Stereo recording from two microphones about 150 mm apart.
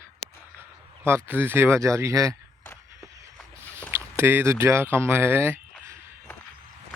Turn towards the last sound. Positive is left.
turn(degrees=-15)  # may be behind; listen again after turning